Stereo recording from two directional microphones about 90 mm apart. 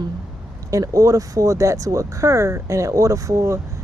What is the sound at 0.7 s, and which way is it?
Speech, 40° right (ahead or behind).